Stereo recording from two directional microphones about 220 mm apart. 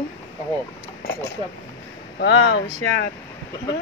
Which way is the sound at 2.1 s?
55° left (ahead or behind).